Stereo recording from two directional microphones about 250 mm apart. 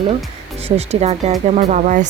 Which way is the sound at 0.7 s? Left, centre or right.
Right.